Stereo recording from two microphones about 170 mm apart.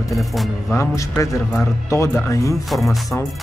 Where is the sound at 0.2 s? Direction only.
Centre (ahead or behind).